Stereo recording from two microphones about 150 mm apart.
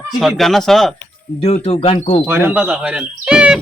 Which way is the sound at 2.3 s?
15° right (ahead or behind).